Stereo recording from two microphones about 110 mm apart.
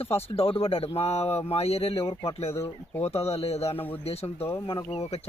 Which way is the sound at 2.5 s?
25° left (ahead or behind).